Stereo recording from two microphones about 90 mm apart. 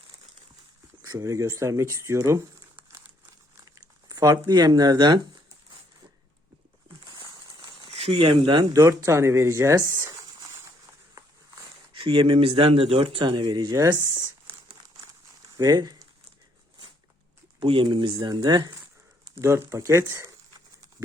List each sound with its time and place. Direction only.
1.0 s speech: 40° right (ahead or behind)
3.8 s speech: 45° right (ahead or behind)
7.9 s speech: 90° right; by 8.6 s 70° right (ahead or behind)
8.7 s speech: 35° right (ahead or behind)
10.2 s a sound: 40° right (ahead or behind)
11.9 s speech: 75° right (ahead or behind); by 13.8 s 50° right (ahead or behind)
13.8 s a sound: 30° right (ahead or behind)
15.5 s speech: 45° right (ahead or behind)
17.6 s speech: 70° right (ahead or behind); by 18.7 s 50° right (ahead or behind)
19.4 s speech: 30° right (ahead or behind)